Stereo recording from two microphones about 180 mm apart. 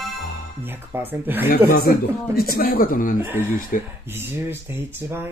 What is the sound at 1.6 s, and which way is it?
Speech, 55° left (ahead or behind).